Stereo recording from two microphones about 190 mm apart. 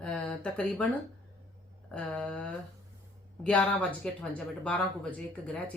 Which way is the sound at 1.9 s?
5° left (ahead or behind).